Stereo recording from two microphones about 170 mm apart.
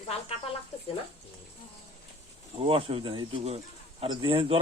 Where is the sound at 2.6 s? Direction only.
30° right (ahead or behind).